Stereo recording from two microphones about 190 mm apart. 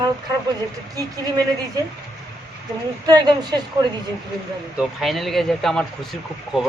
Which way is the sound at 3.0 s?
20° right (ahead or behind).